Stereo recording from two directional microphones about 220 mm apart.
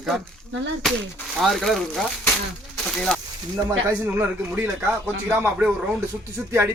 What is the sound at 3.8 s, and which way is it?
Speech, 10° right (ahead or behind).